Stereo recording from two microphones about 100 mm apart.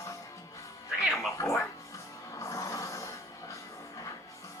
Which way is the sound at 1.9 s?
30° left (ahead or behind).